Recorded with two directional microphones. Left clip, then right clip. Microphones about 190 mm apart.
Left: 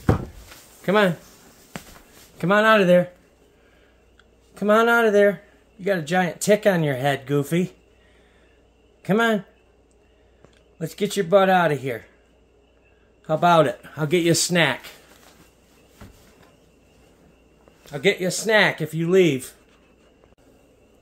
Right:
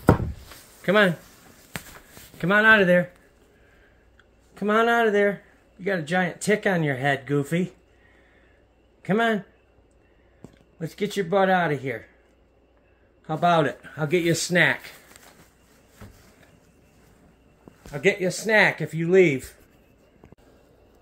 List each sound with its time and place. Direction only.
0.8 s speech: 15° left (ahead or behind)
2.3 s speech: 15° left (ahead or behind)
4.6 s speech: 15° left (ahead or behind)
9.0 s speech: 15° left (ahead or behind)
11.1 s speech: 15° left (ahead or behind)
13.2 s speech: 15° left (ahead or behind)
17.9 s speech: 10° left (ahead or behind)